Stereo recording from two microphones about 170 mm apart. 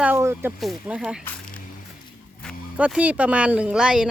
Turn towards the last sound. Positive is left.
turn(degrees=-5)  # may be behind; listen again after turning